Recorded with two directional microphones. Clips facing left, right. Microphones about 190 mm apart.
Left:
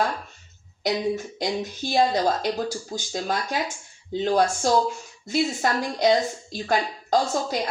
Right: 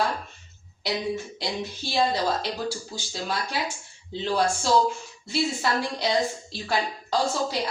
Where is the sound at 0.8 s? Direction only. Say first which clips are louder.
Left 4 dB; 45° left (ahead or behind).